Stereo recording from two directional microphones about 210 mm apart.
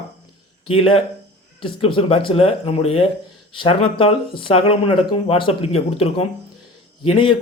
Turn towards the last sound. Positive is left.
turn(degrees=25)  # may be behind; listen again after turning